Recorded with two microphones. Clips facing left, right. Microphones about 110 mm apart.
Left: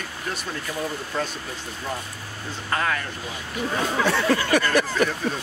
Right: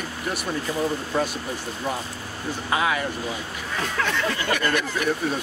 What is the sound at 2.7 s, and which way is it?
Speech, 10° right (ahead or behind).